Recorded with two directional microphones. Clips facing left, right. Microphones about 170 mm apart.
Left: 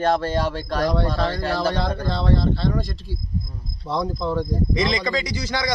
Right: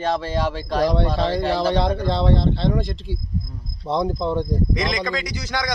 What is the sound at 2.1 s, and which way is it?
Speech, 25° right (ahead or behind).